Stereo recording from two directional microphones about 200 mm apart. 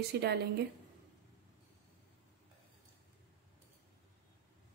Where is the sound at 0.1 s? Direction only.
55° right (ahead or behind).